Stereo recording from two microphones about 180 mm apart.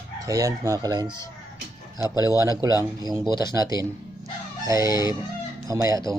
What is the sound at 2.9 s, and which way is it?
Speech, 20° right (ahead or behind).